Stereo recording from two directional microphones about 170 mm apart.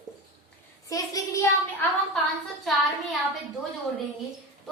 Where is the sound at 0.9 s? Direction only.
20° left (ahead or behind).